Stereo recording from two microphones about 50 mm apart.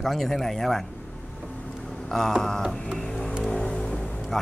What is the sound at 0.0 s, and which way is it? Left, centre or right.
Speech, centre.